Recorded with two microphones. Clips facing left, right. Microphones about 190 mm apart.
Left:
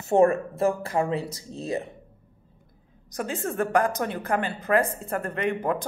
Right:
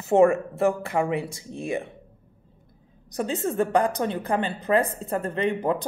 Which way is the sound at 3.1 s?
20° right (ahead or behind).